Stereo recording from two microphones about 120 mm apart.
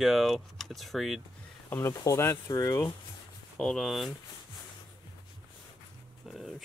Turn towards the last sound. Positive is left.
turn(degrees=0)  # may be behind; listen again after turning